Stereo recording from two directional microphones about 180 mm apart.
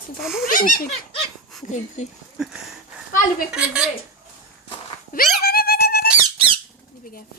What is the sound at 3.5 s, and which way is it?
Speech, 5° right (ahead or behind).